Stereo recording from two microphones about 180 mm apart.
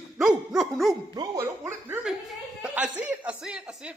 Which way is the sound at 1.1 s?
20° right (ahead or behind).